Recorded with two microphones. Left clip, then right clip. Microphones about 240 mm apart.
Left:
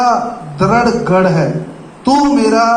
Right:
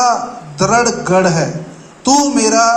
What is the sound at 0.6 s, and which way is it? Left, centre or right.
A man's voice, right.